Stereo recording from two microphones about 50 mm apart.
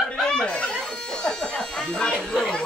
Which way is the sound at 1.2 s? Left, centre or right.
Centre.